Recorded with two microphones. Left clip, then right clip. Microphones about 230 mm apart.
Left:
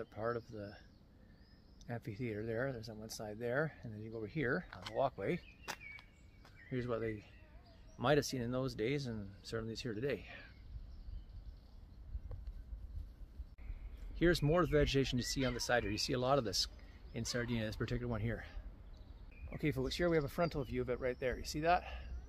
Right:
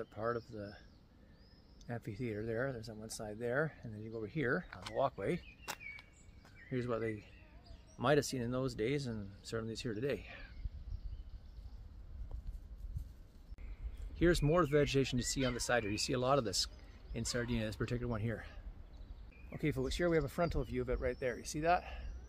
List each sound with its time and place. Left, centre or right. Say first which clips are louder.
0.0 s speech: right 1 dB; centre
1.9 s speech: right 1 dB; centre
14.1 s speech: right 1 dB; centre